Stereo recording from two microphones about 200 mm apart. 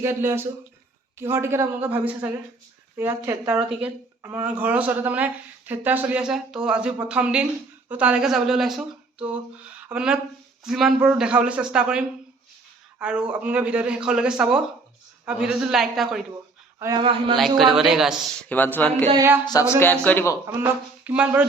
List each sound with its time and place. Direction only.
0.0 s a man's voice: 15° right (ahead or behind)
16.8 s speech: 20° right (ahead or behind)
17.6 s a man's voice: centre (ahead or behind)
18.4 s speech: 10° left (ahead or behind)
19.1 s speech: 10° right (ahead or behind)
19.5 s speech: 15° left (ahead or behind)
20.5 s speech: 10° right (ahead or behind)